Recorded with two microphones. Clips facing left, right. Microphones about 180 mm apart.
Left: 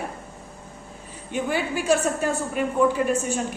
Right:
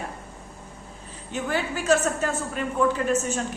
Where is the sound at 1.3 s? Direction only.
10° left (ahead or behind).